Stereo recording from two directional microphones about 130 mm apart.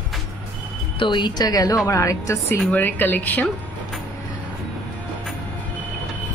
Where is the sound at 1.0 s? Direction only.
35° left (ahead or behind); by 3.5 s 15° left (ahead or behind).